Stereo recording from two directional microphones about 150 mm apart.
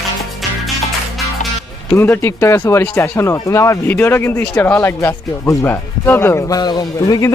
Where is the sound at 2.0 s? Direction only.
15° left (ahead or behind).